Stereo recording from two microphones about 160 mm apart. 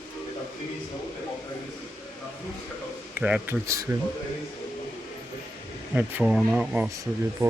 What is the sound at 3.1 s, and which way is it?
Speech, 10° right (ahead or behind).